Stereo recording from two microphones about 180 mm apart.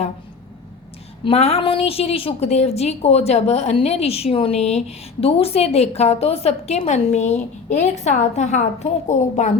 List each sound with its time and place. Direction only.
1.2 s a woman's voice: 35° left (ahead or behind)